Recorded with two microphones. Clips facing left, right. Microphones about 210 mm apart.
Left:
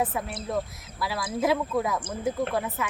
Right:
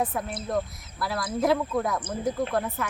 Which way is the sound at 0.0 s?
5° left (ahead or behind).